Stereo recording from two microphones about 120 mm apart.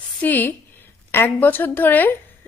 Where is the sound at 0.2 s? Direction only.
15° left (ahead or behind).